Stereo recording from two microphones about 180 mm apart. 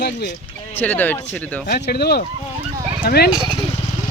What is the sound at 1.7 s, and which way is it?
Speech, 65° left (ahead or behind).